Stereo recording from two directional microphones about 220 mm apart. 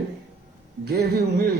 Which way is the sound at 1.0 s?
45° right (ahead or behind).